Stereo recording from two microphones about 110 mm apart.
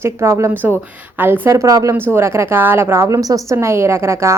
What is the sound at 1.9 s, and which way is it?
A woman's voice, 20° right (ahead or behind).